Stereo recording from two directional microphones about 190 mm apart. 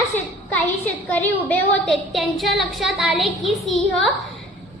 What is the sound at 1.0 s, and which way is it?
A woman's voice, 10° left (ahead or behind).